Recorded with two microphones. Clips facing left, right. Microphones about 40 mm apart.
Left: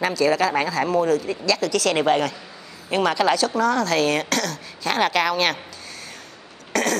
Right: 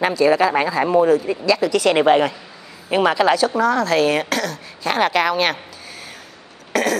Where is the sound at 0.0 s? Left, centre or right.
Centre.